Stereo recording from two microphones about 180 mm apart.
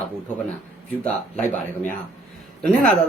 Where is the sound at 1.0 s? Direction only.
10° left (ahead or behind).